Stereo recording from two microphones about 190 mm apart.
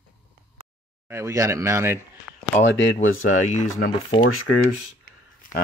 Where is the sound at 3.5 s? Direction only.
40° left (ahead or behind).